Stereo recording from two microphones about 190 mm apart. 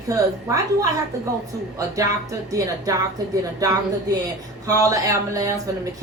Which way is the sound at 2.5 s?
15° right (ahead or behind).